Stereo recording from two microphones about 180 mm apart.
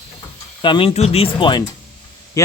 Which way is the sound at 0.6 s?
30° left (ahead or behind).